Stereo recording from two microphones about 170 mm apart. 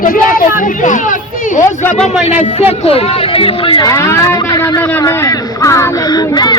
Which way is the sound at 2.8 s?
35° left (ahead or behind).